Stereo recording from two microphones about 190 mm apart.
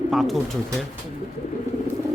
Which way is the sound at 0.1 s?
Centre (ahead or behind).